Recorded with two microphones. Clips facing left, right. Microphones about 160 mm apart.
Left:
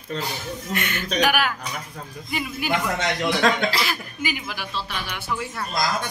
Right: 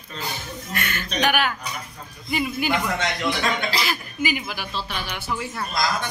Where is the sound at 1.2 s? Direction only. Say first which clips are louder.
Even; 5° left (ahead or behind).